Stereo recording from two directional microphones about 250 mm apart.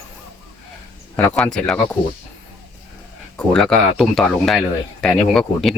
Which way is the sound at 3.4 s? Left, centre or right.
Centre.